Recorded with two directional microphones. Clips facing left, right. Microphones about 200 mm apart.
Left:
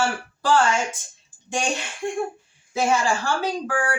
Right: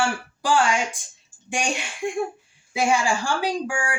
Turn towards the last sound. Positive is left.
turn(degrees=-15)  # may be behind; listen again after turning